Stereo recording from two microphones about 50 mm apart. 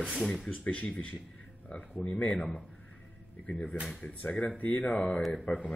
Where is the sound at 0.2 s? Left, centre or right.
Centre.